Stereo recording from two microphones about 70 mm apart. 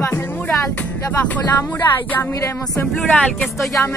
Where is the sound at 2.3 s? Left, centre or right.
Left.